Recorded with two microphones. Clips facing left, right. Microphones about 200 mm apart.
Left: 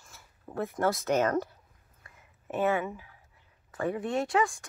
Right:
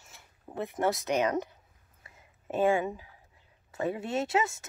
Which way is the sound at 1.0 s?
15° right (ahead or behind).